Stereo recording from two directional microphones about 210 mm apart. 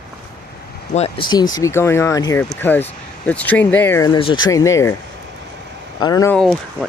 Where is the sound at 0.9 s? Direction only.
25° left (ahead or behind).